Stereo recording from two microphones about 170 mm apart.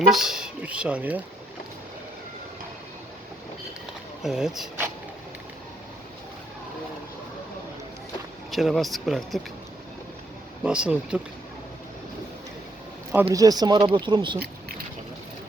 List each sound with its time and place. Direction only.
0.1 s speech: 5° right (ahead or behind)
4.2 s speech: centre (ahead or behind)
8.4 s speech: centre (ahead or behind)
10.6 s speech: 5° right (ahead or behind)
13.3 s speech: 20° right (ahead or behind)
14.3 s keys jangling: 65° right (ahead or behind)